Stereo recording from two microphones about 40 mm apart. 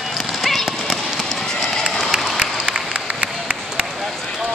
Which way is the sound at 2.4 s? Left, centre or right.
Right.